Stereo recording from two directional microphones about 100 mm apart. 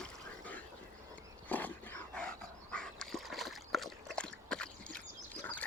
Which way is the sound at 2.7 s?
5° left (ahead or behind).